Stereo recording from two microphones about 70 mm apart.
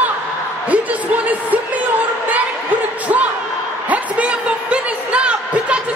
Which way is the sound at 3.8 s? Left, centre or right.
Right.